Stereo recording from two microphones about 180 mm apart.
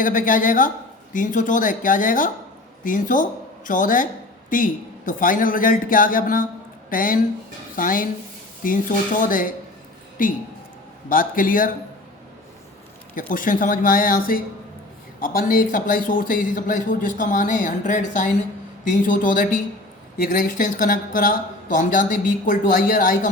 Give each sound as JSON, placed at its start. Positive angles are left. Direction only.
{"t": 0.0, "sound": "speech", "side_deg": 50}
{"t": 13.1, "sound": "speech", "side_deg": 50}